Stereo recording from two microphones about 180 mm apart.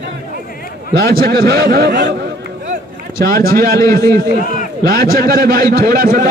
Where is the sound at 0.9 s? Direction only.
60° right (ahead or behind).